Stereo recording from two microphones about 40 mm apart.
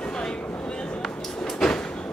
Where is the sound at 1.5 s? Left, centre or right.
Centre.